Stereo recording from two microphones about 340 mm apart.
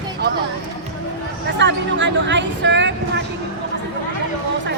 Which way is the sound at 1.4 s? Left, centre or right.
Right.